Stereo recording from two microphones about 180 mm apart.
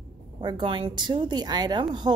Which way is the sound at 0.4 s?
25° right (ahead or behind).